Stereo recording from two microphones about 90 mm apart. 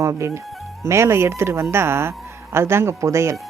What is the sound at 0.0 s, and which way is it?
A woman's voice, 30° right (ahead or behind).